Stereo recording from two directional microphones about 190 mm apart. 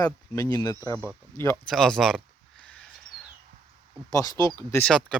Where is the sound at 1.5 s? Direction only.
Centre (ahead or behind).